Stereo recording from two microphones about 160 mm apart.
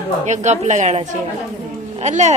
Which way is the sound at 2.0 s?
45° right (ahead or behind).